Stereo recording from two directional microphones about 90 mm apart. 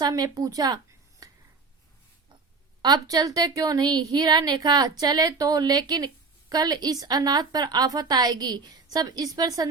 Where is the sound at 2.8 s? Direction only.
45° right (ahead or behind).